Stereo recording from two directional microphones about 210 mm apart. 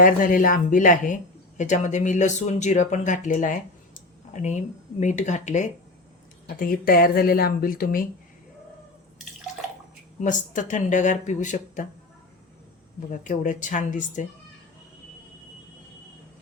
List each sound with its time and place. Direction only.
0.0 s speech: 40° left (ahead or behind)
10.2 s speech: 35° left (ahead or behind)
13.1 s speech: 35° left (ahead or behind)